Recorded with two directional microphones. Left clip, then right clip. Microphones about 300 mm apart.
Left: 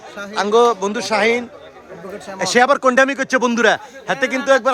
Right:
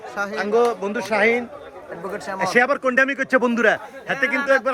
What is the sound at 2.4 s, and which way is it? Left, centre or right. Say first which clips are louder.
A man's voice: left 5 dB; centre.